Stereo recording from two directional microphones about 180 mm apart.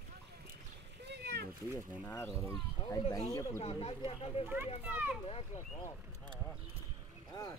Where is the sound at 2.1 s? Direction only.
15° left (ahead or behind).